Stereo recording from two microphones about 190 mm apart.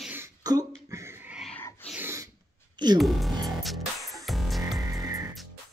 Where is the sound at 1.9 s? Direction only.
10° right (ahead or behind).